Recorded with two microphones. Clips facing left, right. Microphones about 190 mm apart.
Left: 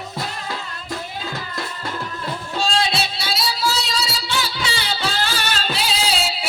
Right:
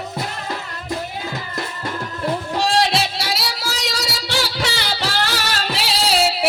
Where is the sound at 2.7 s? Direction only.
75° right (ahead or behind).